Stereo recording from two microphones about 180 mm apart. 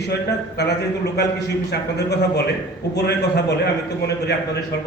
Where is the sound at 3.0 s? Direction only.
65° left (ahead or behind).